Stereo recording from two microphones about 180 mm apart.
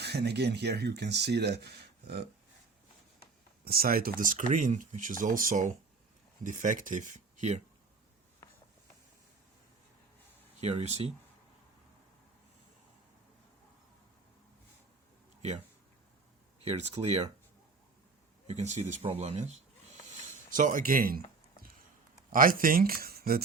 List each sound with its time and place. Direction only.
0.0 s speech: 65° right (ahead or behind)
3.6 s speech: 55° right (ahead or behind); by 7.6 s 40° right (ahead or behind)
10.6 s speech: 35° right (ahead or behind)
15.4 s speech: 35° right (ahead or behind)
18.4 s speech: 40° right (ahead or behind)
22.3 s speech: 50° right (ahead or behind)